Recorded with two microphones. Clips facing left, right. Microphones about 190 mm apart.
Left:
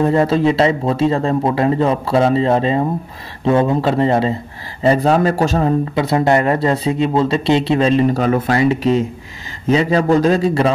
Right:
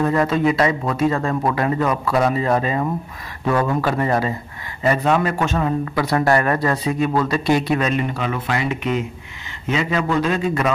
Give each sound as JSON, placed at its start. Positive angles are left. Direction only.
{"t": 0.0, "sound": "a man's voice", "side_deg": 30}
{"t": 5.9, "sound": "a man's voice", "side_deg": 20}